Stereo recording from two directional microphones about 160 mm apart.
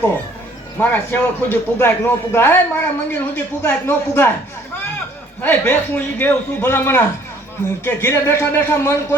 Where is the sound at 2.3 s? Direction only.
15° left (ahead or behind).